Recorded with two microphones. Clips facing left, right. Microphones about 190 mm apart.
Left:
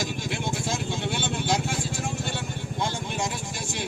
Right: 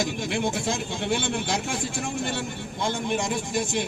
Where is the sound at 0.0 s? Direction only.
60° right (ahead or behind).